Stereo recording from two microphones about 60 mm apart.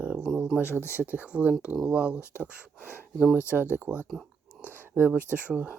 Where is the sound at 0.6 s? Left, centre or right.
Left.